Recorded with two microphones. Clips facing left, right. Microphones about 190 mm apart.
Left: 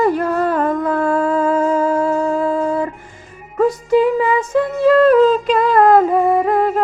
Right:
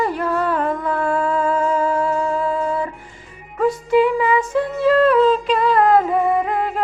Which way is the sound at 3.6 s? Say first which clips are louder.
Left 2 dB; 40° left (ahead or behind).